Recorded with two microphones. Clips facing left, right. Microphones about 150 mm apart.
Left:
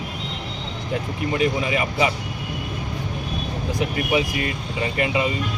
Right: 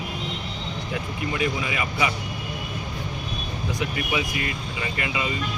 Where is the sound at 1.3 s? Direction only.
30° left (ahead or behind).